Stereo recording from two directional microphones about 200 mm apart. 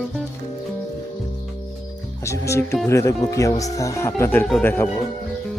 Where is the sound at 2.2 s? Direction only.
15° left (ahead or behind).